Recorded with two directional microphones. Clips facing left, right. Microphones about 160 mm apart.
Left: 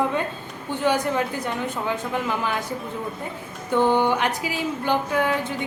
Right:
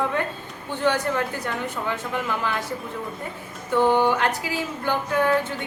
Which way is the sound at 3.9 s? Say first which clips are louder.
Even; 15° left (ahead or behind).